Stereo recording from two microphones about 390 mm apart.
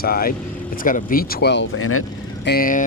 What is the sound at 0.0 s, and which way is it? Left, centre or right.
Speech, left.